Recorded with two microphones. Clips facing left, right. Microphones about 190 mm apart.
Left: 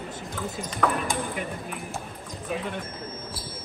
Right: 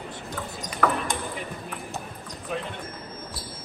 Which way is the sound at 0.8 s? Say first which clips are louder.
Right 1 dB; 5° right (ahead or behind).